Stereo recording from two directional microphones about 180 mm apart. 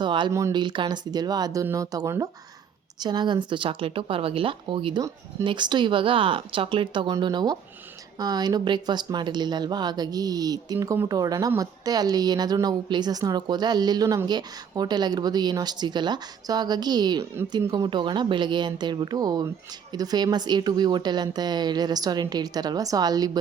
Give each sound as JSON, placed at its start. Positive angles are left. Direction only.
{"t": 0.0, "sound": "speech", "side_deg": -25}